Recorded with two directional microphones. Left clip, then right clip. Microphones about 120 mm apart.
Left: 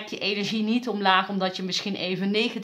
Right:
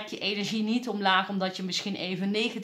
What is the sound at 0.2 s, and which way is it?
Speech, 20° left (ahead or behind).